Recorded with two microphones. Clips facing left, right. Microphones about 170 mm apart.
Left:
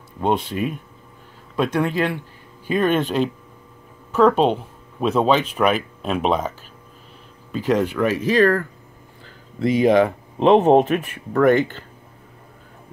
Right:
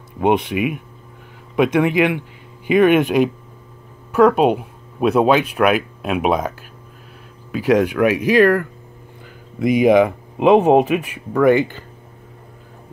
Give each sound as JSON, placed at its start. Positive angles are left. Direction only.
{"t": 0.2, "sound": "speech", "side_deg": -15}
{"t": 7.5, "sound": "speech", "side_deg": -10}